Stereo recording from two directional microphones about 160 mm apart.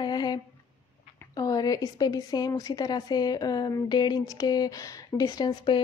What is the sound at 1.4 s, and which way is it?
A woman's voice, 25° left (ahead or behind).